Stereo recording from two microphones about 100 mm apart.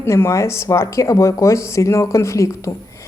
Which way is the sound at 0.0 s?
25° left (ahead or behind).